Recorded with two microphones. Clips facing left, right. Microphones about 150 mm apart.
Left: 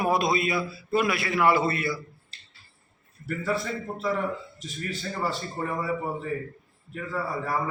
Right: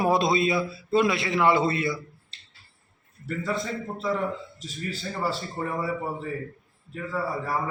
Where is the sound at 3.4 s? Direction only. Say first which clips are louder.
Left 1 dB; centre (ahead or behind).